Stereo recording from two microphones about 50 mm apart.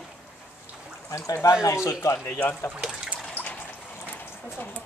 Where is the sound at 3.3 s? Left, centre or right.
Left.